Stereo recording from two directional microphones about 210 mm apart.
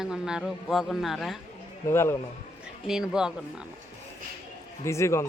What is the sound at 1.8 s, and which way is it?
Speech, 10° left (ahead or behind).